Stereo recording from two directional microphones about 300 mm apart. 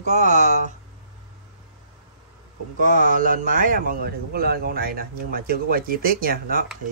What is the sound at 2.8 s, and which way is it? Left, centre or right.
Speech, right.